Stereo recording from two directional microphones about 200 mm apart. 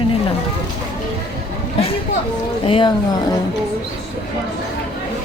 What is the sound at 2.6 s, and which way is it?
Speech, 25° left (ahead or behind).